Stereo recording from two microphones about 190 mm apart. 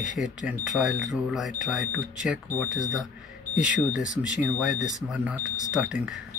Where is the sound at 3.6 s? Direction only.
5° right (ahead or behind).